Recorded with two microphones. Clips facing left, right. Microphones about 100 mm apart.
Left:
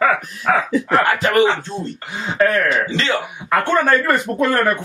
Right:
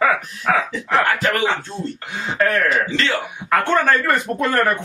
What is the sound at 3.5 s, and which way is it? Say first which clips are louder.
Speech: left 1 dB; 5° left (ahead or behind).